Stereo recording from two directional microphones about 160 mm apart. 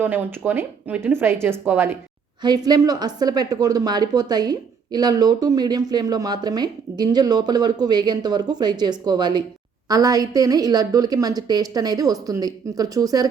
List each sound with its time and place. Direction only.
0.0 s speech: 15° right (ahead or behind)
2.6 s a woman's voice: 25° right (ahead or behind)